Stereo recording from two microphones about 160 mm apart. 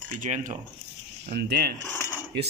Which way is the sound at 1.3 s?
80° right.